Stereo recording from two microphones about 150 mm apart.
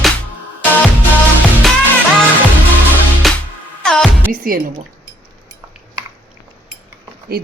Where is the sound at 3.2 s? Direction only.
Centre (ahead or behind).